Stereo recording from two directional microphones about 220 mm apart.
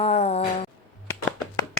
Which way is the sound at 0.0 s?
30° left (ahead or behind).